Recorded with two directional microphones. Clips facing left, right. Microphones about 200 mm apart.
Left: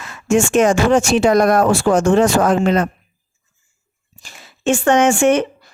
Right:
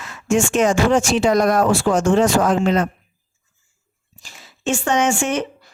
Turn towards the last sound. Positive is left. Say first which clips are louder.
# left 6 dB
turn(degrees=55)  # may be behind; listen again after turning